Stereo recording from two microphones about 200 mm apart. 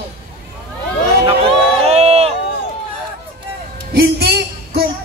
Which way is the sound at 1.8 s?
30° right (ahead or behind).